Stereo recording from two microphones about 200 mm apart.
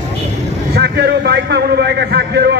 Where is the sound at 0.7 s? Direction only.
55° right (ahead or behind).